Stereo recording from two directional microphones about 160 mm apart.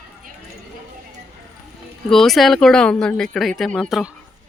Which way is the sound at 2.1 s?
Centre (ahead or behind).